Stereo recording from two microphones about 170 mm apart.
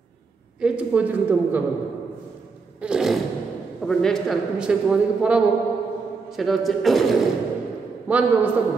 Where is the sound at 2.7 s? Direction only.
5° right (ahead or behind).